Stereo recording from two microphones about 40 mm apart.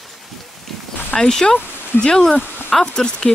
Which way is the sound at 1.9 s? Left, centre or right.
Left.